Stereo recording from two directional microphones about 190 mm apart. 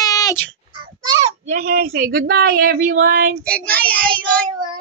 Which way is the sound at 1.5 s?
50° right (ahead or behind).